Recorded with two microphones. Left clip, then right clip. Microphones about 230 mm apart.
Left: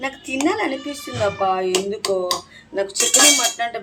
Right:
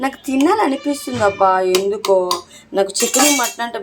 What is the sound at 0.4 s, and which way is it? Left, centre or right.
Speech, right.